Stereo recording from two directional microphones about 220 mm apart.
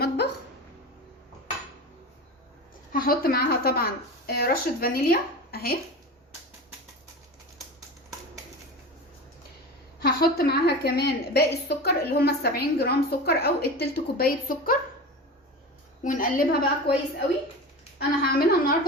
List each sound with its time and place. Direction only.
2.9 s a woman's voice: 40° left (ahead or behind)
10.0 s a woman's voice: 45° left (ahead or behind)
16.0 s a woman's voice: 40° left (ahead or behind)